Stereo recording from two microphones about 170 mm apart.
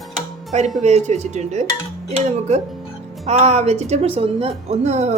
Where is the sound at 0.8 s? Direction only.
40° right (ahead or behind).